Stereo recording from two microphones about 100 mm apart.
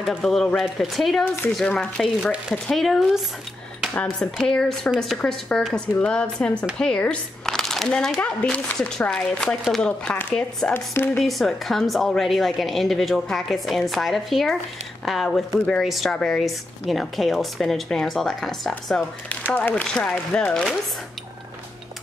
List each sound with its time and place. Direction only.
0.0 s a woman's voice: centre (ahead or behind)
1.2 s speech: 20° left (ahead or behind)
1.6 s a woman's voice: 10° left (ahead or behind)
10.7 s speech: 20° left (ahead or behind)
11.1 s a woman's voice: centre (ahead or behind)
19.5 s speech: 15° left (ahead or behind)